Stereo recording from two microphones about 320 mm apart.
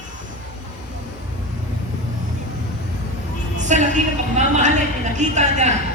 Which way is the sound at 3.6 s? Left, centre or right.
Right.